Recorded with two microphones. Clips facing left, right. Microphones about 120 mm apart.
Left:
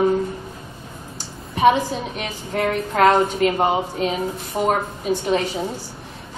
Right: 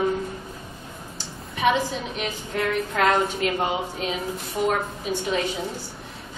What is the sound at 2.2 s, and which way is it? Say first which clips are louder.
A woman's voice: left 3 dB; 40° left (ahead or behind).